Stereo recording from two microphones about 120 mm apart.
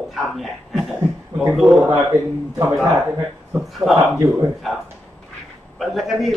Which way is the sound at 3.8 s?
5° right (ahead or behind).